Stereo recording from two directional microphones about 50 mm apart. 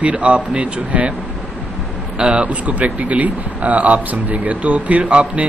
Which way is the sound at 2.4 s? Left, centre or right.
Right.